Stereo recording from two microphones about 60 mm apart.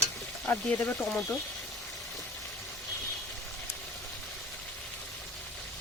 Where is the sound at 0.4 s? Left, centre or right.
Left.